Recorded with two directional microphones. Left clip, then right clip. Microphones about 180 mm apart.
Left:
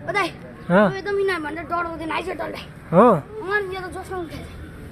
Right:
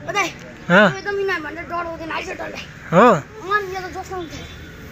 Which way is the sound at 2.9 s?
5° left (ahead or behind).